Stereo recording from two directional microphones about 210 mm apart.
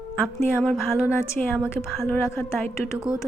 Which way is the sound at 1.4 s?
Centre (ahead or behind).